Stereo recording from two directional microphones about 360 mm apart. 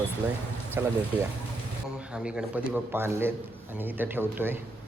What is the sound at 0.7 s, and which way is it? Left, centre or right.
Speech, centre.